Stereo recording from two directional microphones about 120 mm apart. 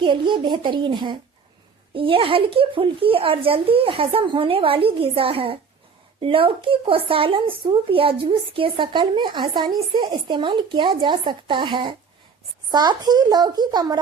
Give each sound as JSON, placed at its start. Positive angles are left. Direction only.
{"t": 0.0, "sound": "a child's voice", "side_deg": -40}